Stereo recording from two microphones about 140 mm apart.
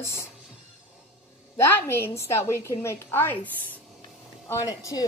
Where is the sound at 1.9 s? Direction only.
15° left (ahead or behind).